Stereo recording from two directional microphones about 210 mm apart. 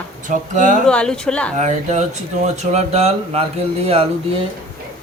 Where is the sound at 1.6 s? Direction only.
35° right (ahead or behind).